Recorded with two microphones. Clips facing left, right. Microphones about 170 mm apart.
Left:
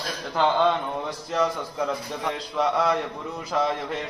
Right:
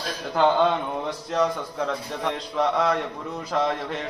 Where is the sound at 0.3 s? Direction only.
5° right (ahead or behind).